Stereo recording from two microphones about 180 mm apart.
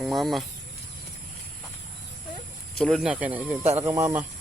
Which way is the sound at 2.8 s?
Centre (ahead or behind).